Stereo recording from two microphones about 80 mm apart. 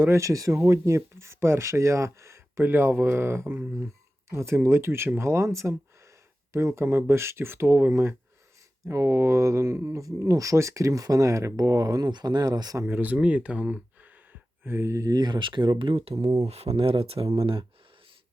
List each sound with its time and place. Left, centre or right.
0.0 s speech: right
12.8 s speech: right
14.6 s speech: right